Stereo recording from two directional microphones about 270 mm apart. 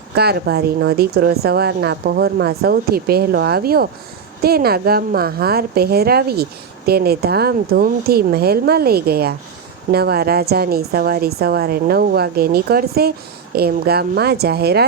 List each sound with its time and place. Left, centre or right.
0.1 s a woman's voice: right